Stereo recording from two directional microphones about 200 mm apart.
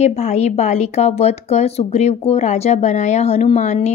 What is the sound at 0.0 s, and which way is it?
Speech, 35° left (ahead or behind).